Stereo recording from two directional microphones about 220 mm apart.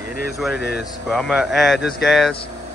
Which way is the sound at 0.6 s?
50° left (ahead or behind).